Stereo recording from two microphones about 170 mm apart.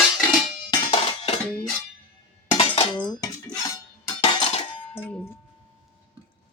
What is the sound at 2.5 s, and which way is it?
Cutlery, 30° left (ahead or behind).